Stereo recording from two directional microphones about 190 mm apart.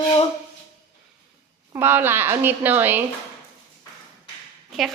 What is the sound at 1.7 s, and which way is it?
A woman's voice, 10° right (ahead or behind).